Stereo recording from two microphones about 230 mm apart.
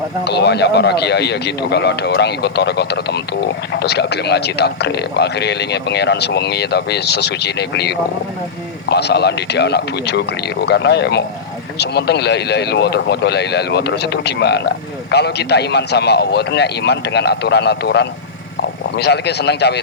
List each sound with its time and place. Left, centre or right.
0.3 s speech: left